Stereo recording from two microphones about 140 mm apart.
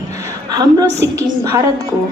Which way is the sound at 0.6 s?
25° right (ahead or behind).